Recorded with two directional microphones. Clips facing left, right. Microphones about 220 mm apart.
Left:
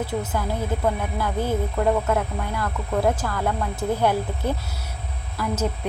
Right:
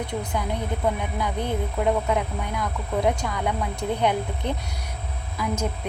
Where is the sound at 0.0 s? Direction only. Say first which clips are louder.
Left 2 dB; 5° left (ahead or behind).